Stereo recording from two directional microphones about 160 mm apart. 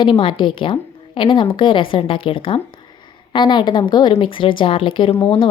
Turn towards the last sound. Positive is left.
turn(degrees=30)  # may be behind; listen again after turning